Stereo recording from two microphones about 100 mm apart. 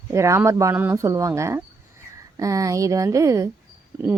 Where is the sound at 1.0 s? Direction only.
35° right (ahead or behind).